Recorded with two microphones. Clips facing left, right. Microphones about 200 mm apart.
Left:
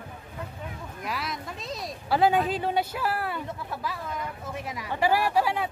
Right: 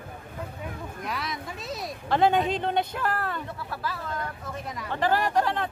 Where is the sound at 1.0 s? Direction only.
Centre (ahead or behind).